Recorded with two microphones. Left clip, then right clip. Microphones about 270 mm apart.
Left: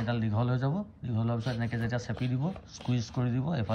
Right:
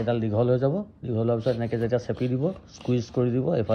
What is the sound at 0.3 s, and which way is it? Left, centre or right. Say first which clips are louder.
A man's voice: right 11 dB; right.